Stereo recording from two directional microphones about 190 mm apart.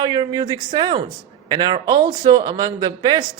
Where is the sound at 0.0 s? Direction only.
25° right (ahead or behind).